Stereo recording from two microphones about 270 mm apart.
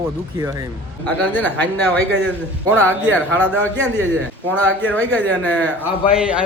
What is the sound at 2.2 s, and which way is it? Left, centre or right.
Speech, centre.